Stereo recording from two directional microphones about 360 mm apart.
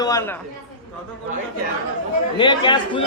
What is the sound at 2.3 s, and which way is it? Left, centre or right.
Speech, centre.